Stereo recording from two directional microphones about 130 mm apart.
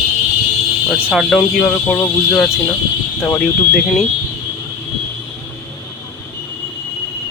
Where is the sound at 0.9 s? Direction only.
5° right (ahead or behind).